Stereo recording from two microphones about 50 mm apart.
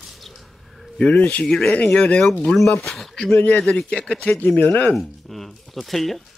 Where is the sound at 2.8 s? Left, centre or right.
Centre.